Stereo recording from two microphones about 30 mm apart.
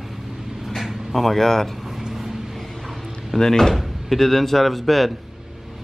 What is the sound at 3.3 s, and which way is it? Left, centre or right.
Speech, centre.